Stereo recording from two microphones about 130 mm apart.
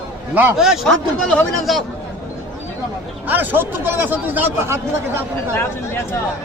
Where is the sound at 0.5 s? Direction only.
Centre (ahead or behind).